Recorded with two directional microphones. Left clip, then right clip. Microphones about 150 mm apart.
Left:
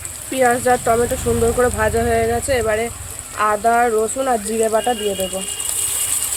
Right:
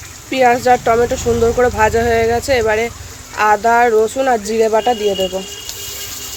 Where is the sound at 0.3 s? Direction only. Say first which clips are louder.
Right 4 dB; 20° right (ahead or behind).